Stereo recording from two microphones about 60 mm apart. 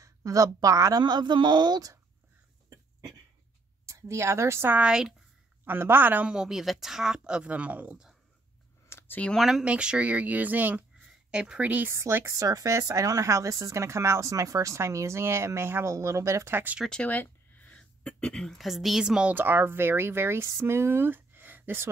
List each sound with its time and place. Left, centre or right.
0.0 s a woman's voice: right
3.8 s a woman's voice: right
4.8 s speech: centre
5.7 s speech: right
6.2 s speech: centre
8.8 s a sound: left
9.4 s speech: centre
9.7 s speech: centre
11.1 s speech: centre
11.9 s speech: right
12.3 s speech: right
16.9 s a sound: left
18.6 s a woman's voice: centre
19.3 s speech: right